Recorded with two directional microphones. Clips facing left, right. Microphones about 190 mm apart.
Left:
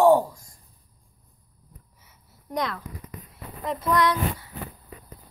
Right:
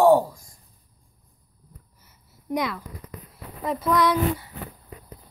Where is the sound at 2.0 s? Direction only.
5° right (ahead or behind).